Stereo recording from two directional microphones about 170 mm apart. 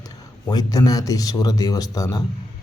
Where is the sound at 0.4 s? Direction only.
20° left (ahead or behind).